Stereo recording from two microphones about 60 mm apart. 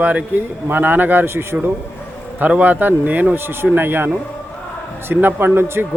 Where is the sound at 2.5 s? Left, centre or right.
Right.